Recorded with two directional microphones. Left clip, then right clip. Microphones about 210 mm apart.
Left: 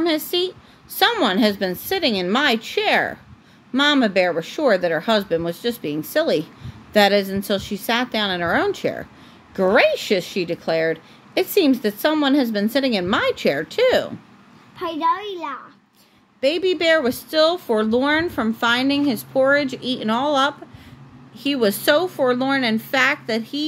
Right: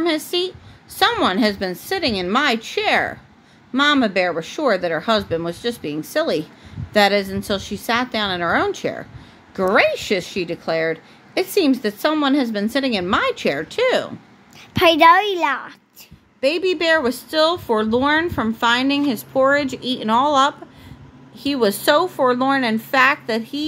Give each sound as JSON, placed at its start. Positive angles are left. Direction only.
{"t": 0.0, "sound": "speech", "side_deg": -5}
{"t": 14.8, "sound": "a woman's voice", "side_deg": -45}
{"t": 16.3, "sound": "speech", "side_deg": 0}